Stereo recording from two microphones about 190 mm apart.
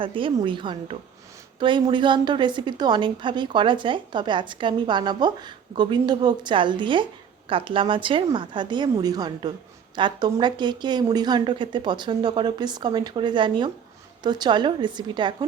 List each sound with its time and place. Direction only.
0.0 s a woman's voice: 25° right (ahead or behind)